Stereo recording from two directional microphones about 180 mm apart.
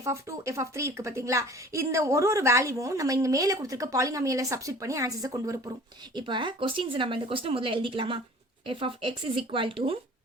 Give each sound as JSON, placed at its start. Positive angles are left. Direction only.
{"t": 0.0, "sound": "a woman's voice", "side_deg": -15}